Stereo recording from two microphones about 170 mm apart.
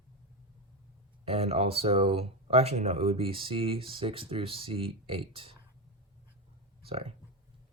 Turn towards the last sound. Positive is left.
turn(degrees=-35)  # may be behind; listen again after turning